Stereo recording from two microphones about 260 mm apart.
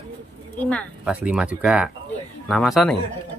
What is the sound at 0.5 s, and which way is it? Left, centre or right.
Speech, centre.